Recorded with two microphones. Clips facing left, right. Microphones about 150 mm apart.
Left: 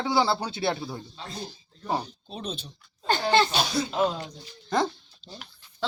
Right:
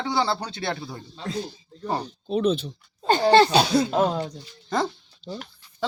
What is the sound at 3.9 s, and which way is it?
Speech, 50° right (ahead or behind).